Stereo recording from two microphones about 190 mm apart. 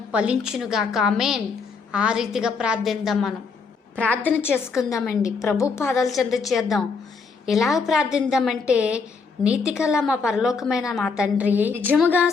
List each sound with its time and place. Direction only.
0.1 s a woman's voice: 5° right (ahead or behind)
4.0 s a woman's voice: 10° left (ahead or behind)
6.1 s a woman's voice: centre (ahead or behind)
12.0 s a woman's voice: 10° left (ahead or behind)